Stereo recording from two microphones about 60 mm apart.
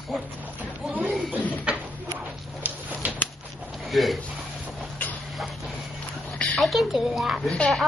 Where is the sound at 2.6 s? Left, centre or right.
Right.